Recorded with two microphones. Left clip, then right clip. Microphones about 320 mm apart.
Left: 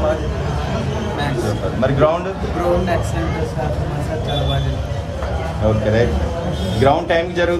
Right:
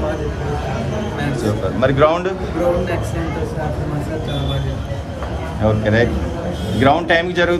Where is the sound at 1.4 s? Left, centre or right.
Right.